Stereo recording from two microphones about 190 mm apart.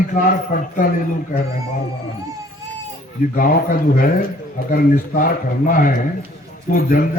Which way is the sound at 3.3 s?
45° left (ahead or behind).